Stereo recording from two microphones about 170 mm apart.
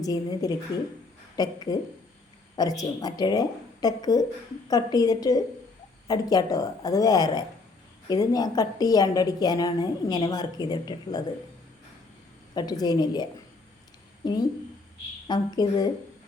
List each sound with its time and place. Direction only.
0.0 s a woman's voice: 20° left (ahead or behind)
12.5 s a woman's voice: 25° left (ahead or behind)
14.2 s a woman's voice: 25° left (ahead or behind)